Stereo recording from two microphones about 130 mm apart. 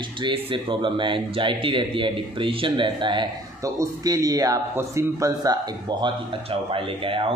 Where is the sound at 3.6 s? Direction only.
25° right (ahead or behind); by 7.3 s 45° right (ahead or behind).